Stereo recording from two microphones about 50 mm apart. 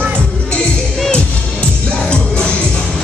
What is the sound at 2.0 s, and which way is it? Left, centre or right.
Music, left.